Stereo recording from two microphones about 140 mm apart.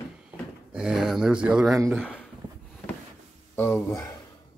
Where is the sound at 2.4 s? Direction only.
30° right (ahead or behind).